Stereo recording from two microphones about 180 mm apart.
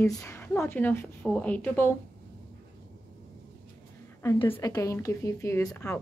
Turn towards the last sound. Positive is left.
turn(degrees=20)  # may be behind; listen again after turning